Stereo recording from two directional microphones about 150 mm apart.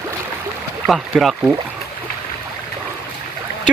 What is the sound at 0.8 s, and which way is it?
Speech, centre (ahead or behind).